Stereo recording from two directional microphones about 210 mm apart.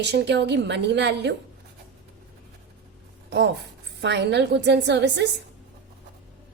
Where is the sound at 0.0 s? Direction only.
55° right (ahead or behind).